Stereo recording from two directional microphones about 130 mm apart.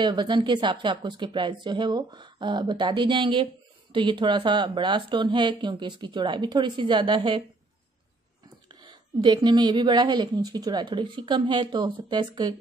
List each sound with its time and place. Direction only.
0.0 s a woman's voice: 35° right (ahead or behind)
8.6 s a woman's voice: 35° right (ahead or behind)